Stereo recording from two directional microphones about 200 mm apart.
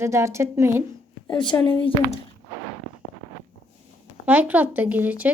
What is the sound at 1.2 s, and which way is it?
Speech, 20° left (ahead or behind).